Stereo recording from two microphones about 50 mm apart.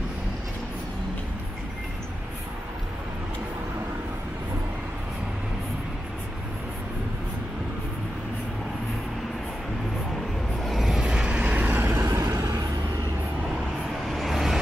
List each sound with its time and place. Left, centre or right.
10.6 s vehicle: centre
11.0 s vehicle: centre; by 11.8 s right
11.8 s vehicle: right
14.0 s vehicle: centre